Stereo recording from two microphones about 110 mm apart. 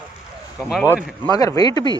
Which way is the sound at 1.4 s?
35° left (ahead or behind).